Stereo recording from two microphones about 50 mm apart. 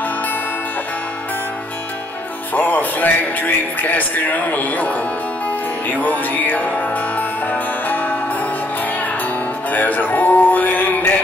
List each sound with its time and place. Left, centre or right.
2.5 s speech: left
5.9 s music: left
9.7 s music: left